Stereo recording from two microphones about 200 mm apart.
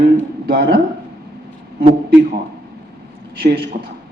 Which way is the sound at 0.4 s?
50° right (ahead or behind).